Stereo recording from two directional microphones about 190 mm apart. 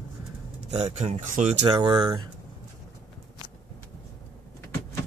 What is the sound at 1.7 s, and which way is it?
Speech, 20° right (ahead or behind).